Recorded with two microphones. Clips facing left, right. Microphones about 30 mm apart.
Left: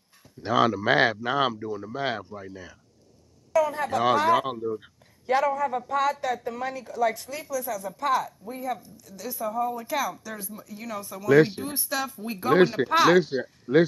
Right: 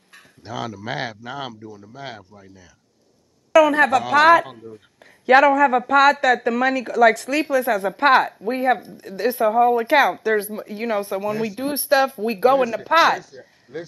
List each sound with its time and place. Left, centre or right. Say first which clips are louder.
0.4 s speech: left 8 dB; centre
3.5 s speech: right 9 dB; right
12.5 s speech: even; left
12.8 s speech: right 5 dB; centre
13.2 s speech: left 14 dB; left